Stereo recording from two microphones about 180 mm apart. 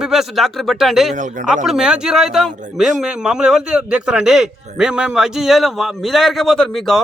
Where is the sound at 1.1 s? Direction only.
45° right (ahead or behind).